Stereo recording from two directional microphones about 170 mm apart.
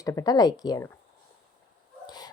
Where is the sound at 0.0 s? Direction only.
20° left (ahead or behind).